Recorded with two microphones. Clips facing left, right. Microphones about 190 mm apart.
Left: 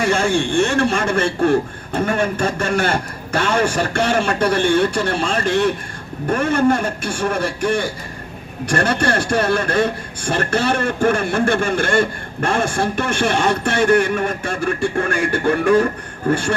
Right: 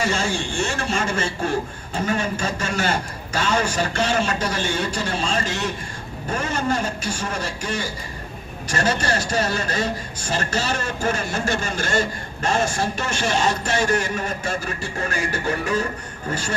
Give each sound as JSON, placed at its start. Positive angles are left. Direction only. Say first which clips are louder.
{"t": 0.0, "sound": "a man's voice", "louder": "left 6 dB", "side_deg": 55}